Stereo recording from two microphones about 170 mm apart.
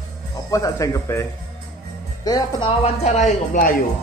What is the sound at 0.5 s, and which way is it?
Speech, 20° left (ahead or behind).